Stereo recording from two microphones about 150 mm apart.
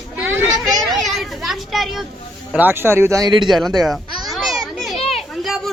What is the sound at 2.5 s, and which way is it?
Speech, 10° right (ahead or behind).